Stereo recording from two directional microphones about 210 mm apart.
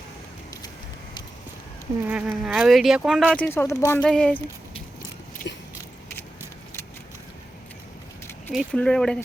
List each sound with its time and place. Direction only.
2.0 s insect: 5° right (ahead or behind)
3.3 s speech: 10° left (ahead or behind)
5.5 s biting: 55° left (ahead or behind)
8.5 s insect: 5° left (ahead or behind)